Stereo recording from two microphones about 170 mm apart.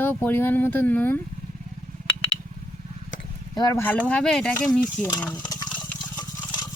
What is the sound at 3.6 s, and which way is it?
Speech, 20° left (ahead or behind).